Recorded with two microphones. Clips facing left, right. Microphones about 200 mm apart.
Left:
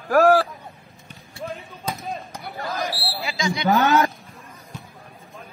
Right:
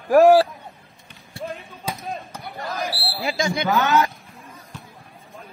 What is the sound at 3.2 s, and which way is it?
Speech, 50° right (ahead or behind).